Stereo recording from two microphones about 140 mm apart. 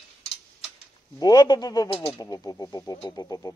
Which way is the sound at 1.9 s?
45° left (ahead or behind).